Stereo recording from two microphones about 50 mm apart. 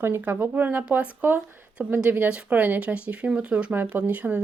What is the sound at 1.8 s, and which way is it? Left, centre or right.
Speech, right.